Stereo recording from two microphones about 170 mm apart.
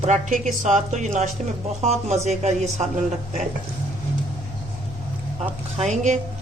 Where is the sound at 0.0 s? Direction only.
50° right (ahead or behind).